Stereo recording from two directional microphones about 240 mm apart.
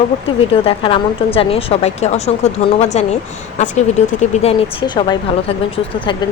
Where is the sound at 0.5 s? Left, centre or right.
Left.